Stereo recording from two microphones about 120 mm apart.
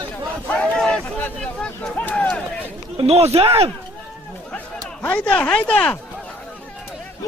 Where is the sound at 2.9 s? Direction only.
60° right (ahead or behind).